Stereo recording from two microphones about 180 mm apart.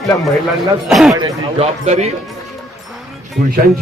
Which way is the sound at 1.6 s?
40° right (ahead or behind).